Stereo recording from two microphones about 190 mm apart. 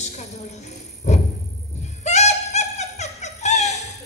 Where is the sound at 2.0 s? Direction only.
35° left (ahead or behind).